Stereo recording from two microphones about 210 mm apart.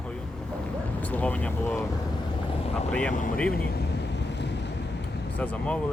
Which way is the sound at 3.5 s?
50° left (ahead or behind).